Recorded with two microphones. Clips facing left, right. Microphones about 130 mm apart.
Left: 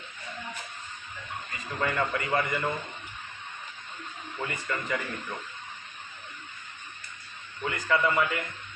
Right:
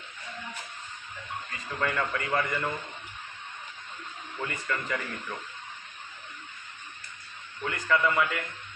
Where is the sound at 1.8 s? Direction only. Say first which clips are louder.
Left 1 dB; 20° left (ahead or behind).